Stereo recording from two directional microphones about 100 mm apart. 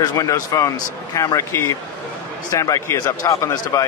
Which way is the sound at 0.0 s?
40° left (ahead or behind).